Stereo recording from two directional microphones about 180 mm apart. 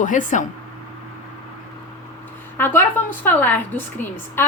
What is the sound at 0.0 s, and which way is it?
Speech, 45° left (ahead or behind).